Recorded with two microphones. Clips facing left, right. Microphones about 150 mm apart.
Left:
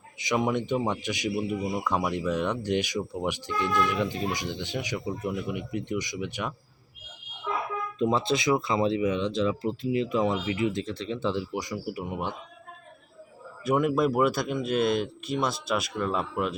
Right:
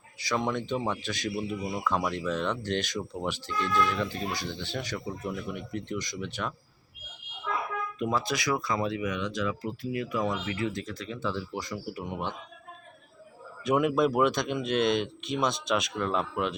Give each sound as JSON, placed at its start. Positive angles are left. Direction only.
{"t": 0.2, "sound": "speech", "side_deg": 15}
{"t": 7.9, "sound": "speech", "side_deg": 25}
{"t": 13.7, "sound": "speech", "side_deg": 0}